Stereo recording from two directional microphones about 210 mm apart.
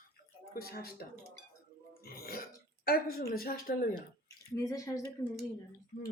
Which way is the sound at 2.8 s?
45° left (ahead or behind).